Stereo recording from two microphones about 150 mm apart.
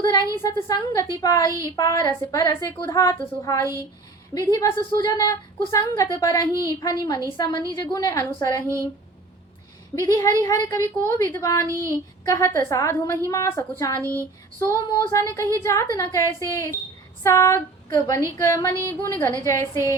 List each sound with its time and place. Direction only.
0.0 s a woman's voice: 30° left (ahead or behind)
4.4 s a woman's voice: 25° left (ahead or behind)
9.9 s a woman's voice: 20° left (ahead or behind)
11.7 s a sound: 20° right (ahead or behind)
12.2 s a woman's voice: 20° left (ahead or behind)